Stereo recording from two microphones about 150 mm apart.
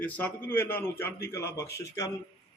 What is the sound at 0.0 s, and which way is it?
A man's voice, 10° left (ahead or behind).